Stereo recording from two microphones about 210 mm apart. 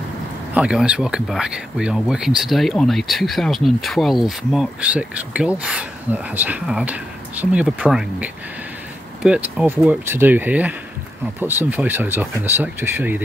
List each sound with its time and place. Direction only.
0.6 s speech: 5° right (ahead or behind)